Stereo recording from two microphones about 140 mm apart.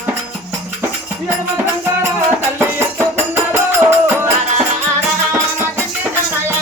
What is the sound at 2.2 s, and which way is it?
Music, 15° right (ahead or behind).